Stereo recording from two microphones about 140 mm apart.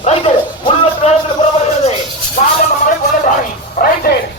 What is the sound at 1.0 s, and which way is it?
Music, 45° left (ahead or behind).